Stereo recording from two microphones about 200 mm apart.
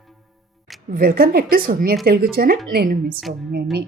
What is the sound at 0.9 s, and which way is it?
Speech, 45° right (ahead or behind).